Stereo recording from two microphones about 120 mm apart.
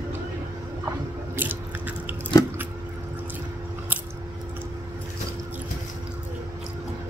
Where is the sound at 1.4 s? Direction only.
15° right (ahead or behind).